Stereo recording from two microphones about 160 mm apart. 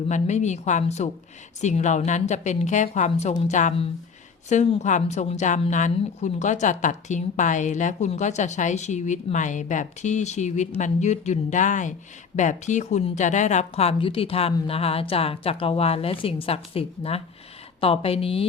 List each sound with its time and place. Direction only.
0.1 s a woman's voice: 45° left (ahead or behind)